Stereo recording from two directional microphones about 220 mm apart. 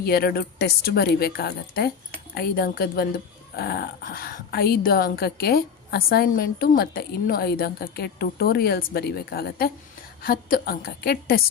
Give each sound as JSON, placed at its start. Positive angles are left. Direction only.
{"t": 0.0, "sound": "speech", "side_deg": 45}